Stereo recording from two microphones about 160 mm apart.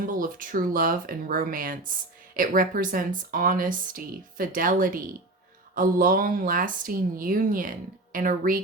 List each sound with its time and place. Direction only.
0.0 s speech: 60° right (ahead or behind)